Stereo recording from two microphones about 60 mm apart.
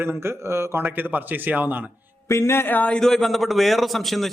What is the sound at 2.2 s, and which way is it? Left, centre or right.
Speech, left.